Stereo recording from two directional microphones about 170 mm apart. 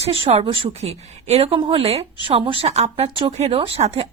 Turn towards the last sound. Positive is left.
turn(degrees=-35)  # may be behind; listen again after turning